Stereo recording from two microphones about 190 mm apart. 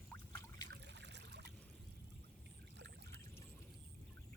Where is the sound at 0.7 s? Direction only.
65° right (ahead or behind).